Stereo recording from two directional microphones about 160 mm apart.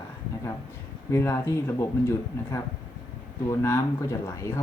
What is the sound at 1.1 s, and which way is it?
Speech, 15° left (ahead or behind).